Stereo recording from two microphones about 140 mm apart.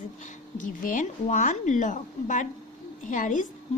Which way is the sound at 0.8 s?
70° left (ahead or behind).